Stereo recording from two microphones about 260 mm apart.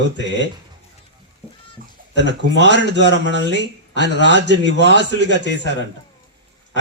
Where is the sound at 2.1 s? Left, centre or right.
Right.